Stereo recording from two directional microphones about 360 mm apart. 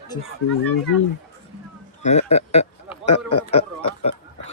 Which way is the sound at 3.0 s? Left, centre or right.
Left.